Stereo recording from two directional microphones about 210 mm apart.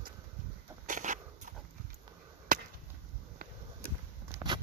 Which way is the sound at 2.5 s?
40° right (ahead or behind).